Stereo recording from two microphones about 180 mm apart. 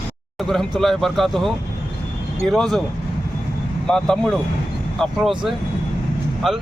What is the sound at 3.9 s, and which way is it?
Speech, 5° left (ahead or behind).